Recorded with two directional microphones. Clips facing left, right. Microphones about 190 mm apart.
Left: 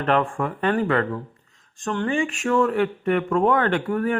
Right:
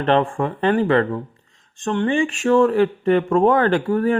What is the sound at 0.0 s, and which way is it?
Speech, 25° right (ahead or behind).